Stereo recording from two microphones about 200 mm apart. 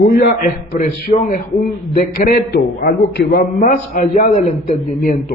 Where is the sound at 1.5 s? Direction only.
Centre (ahead or behind).